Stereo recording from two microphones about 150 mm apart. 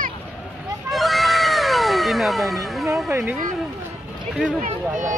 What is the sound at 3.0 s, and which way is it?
Speech, 15° right (ahead or behind).